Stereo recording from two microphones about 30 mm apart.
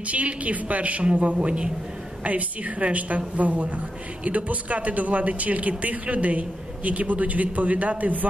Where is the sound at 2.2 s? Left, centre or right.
Right.